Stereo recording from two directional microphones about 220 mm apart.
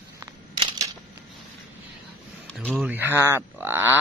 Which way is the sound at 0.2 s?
15° right (ahead or behind).